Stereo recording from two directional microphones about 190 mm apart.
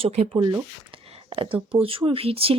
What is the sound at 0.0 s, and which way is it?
Speech, 30° right (ahead or behind).